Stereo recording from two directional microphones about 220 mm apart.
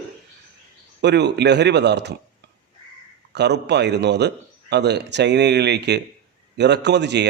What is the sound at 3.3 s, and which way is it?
Speech, 50° right (ahead or behind).